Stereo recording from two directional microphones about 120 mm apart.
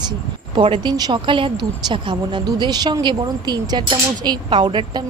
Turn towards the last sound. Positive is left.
turn(degrees=-40)  # may be behind; listen again after turning